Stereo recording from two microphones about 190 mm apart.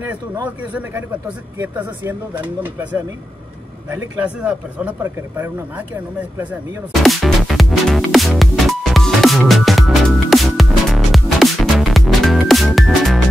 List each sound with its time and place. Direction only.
1.6 s speech: 10° right (ahead or behind)
7.0 s music: centre (ahead or behind)